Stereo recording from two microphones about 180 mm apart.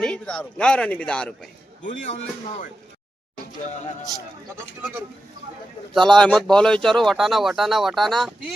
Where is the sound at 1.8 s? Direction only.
45° left (ahead or behind).